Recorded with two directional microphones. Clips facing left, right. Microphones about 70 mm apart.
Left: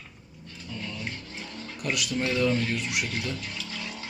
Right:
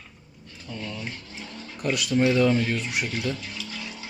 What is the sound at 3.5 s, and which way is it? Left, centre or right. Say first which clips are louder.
Vehicle: right 1 dB; centre.